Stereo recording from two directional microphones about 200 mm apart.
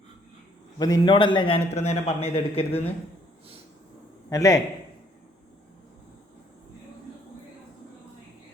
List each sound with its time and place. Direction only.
0.8 s a man's voice: 20° left (ahead or behind)
4.3 s a man's voice: 15° left (ahead or behind)